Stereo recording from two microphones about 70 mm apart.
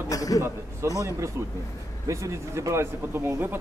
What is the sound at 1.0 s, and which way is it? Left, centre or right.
Speech, right.